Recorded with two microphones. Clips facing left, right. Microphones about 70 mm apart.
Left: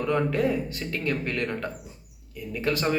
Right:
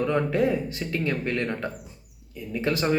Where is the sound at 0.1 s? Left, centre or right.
Right.